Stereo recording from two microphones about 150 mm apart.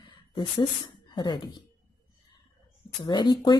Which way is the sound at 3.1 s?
30° left (ahead or behind).